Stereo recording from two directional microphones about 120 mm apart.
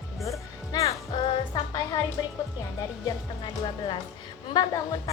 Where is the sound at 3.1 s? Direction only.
40° left (ahead or behind).